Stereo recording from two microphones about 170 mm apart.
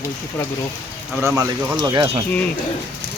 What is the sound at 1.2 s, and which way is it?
Speech, 20° right (ahead or behind).